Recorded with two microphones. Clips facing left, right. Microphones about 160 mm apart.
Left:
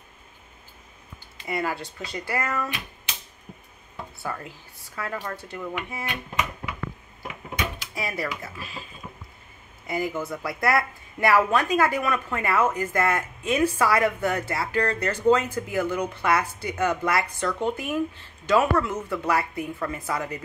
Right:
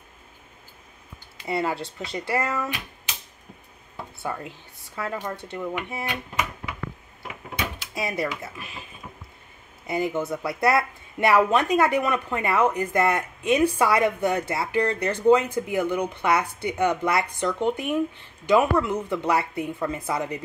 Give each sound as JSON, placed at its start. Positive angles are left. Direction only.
{"t": 1.5, "sound": "a woman's voice", "side_deg": -25}
{"t": 4.2, "sound": "a woman's voice", "side_deg": -25}
{"t": 7.5, "sound": "a sound", "side_deg": -25}
{"t": 8.4, "sound": "a woman's voice", "side_deg": -20}
{"t": 9.8, "sound": "a woman's voice", "side_deg": -25}